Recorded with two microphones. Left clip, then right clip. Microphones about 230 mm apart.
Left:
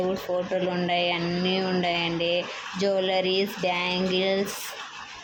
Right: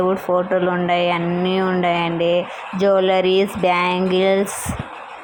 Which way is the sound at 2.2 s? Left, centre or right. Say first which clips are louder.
Right 8 dB; right.